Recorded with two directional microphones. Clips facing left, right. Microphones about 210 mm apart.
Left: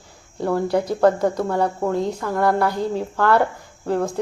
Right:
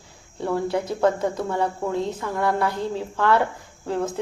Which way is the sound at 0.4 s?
35° left (ahead or behind).